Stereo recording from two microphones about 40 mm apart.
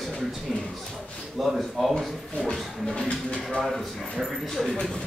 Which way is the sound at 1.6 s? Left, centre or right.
Centre.